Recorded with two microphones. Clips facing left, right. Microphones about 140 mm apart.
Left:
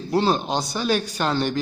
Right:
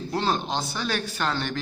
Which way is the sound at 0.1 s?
15° left (ahead or behind).